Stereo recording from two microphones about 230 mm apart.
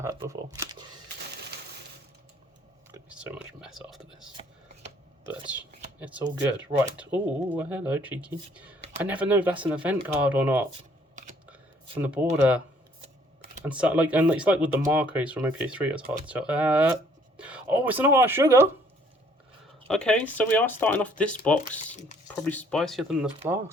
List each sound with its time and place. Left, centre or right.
0.0 s speech: centre
2.9 s speech: centre
5.5 s speech: centre
11.1 s a sound: right
11.9 s speech: centre
13.7 s speech: centre
19.9 s speech: centre